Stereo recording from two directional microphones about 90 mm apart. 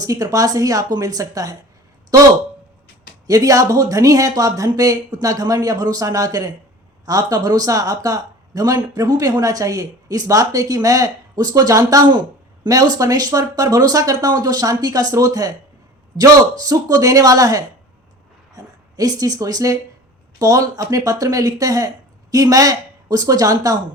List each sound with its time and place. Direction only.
0.0 s speech: 40° right (ahead or behind)
3.2 s speech: 40° right (ahead or behind)